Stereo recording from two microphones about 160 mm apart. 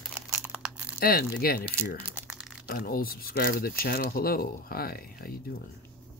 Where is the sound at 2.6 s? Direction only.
70° left (ahead or behind).